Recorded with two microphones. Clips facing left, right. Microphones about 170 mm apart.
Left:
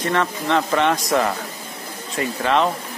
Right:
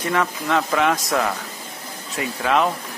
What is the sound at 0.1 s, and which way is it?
Speech, 5° right (ahead or behind).